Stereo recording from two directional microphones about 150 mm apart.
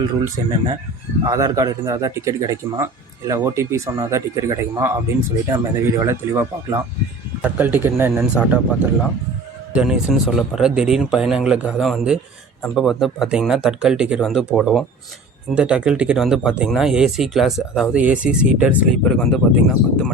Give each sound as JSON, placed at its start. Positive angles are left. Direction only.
{"t": 1.2, "sound": "a man's voice", "side_deg": -25}
{"t": 19.0, "sound": "speech", "side_deg": 0}